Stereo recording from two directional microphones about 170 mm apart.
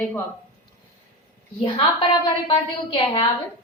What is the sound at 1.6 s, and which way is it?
A woman's voice, 30° left (ahead or behind).